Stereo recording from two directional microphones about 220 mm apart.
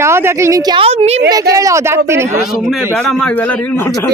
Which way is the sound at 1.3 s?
15° right (ahead or behind).